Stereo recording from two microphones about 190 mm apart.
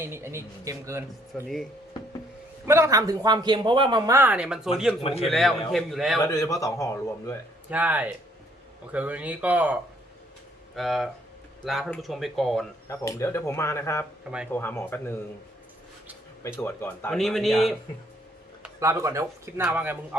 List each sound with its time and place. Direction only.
0.0 s a man's voice: 15° right (ahead or behind)
1.3 s speech: centre (ahead or behind)
2.6 s a man's voice: 15° right (ahead or behind)
5.0 s a man's voice: 30° left (ahead or behind)
5.3 s speech: centre (ahead or behind)
6.3 s speech: 15° left (ahead or behind)
7.7 s a man's voice: 10° right (ahead or behind)
10.8 s speech: centre (ahead or behind)
12.9 s speech: 15° left (ahead or behind)
16.4 s speech: 10° left (ahead or behind)
17.2 s speech: centre (ahead or behind)
18.6 s a man's voice: 15° right (ahead or behind)